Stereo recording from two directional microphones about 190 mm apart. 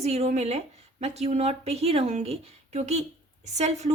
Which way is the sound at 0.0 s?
35° right (ahead or behind).